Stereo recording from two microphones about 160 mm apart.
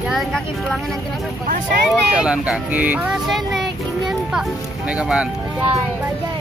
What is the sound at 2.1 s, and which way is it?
Speech, 5° right (ahead or behind).